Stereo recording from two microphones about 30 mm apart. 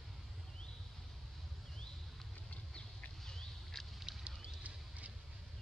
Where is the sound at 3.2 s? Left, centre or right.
Centre.